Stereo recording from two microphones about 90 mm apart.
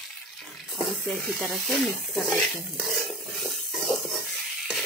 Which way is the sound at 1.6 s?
5° left (ahead or behind).